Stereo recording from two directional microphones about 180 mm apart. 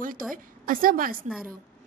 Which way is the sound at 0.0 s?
50° right (ahead or behind).